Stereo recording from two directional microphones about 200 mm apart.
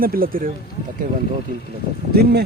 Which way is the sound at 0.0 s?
45° right (ahead or behind).